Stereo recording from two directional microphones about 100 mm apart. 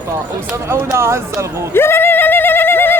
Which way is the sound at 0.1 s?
25° right (ahead or behind).